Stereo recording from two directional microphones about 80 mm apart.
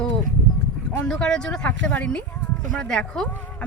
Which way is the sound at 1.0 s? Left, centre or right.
Centre.